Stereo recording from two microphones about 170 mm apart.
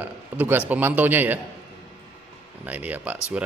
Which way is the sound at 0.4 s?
10° right (ahead or behind).